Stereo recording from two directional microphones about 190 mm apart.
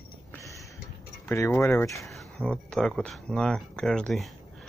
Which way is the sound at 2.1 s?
Centre (ahead or behind).